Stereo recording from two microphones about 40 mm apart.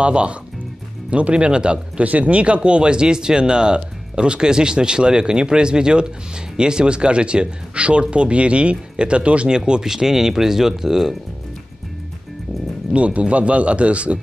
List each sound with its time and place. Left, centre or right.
0.0 s speech: right
9.5 s speech: centre
12.9 s speech: right